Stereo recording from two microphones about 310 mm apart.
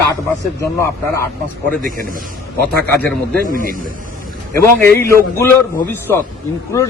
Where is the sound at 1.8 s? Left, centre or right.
Right.